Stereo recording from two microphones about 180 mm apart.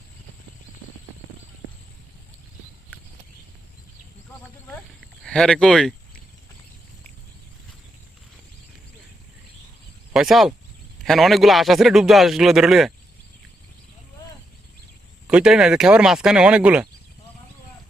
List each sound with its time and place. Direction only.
5.2 s speech: 5° left (ahead or behind)
10.1 s a man's voice: centre (ahead or behind)
15.3 s a man's voice: 5° right (ahead or behind)